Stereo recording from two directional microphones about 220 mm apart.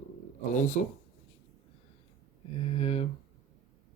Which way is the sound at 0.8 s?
35° left (ahead or behind).